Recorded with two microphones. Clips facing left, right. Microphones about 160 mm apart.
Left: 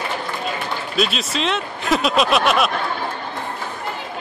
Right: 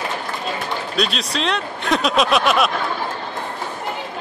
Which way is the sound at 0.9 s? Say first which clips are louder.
Left 2 dB; centre (ahead or behind).